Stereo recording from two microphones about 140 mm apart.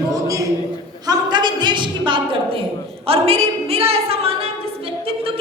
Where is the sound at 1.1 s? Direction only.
30° right (ahead or behind).